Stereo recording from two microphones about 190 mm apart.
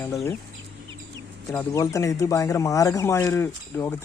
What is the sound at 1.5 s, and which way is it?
Speech, 15° left (ahead or behind).